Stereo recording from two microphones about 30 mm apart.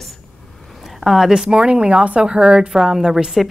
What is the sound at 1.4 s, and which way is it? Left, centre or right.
Speech, right.